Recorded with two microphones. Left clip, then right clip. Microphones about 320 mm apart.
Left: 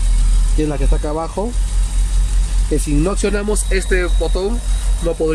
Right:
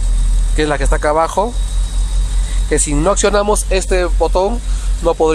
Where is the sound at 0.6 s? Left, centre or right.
Right.